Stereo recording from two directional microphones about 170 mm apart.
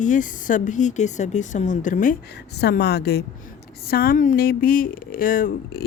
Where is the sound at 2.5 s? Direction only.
75° left (ahead or behind).